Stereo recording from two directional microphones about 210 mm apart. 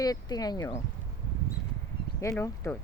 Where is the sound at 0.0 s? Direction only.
15° left (ahead or behind).